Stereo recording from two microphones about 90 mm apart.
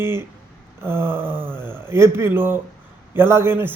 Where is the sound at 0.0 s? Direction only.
25° right (ahead or behind).